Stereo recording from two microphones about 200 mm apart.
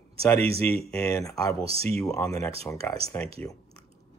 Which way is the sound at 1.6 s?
30° right (ahead or behind).